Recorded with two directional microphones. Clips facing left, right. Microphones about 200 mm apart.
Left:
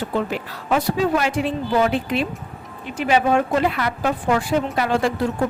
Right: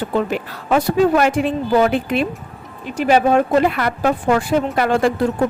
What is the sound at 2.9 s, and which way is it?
Speech, 40° right (ahead or behind).